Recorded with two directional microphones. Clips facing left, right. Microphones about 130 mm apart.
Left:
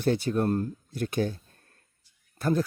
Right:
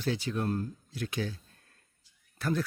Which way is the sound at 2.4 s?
45° left (ahead or behind).